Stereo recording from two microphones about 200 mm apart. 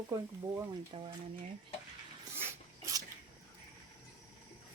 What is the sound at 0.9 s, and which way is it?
Speech, 30° right (ahead or behind).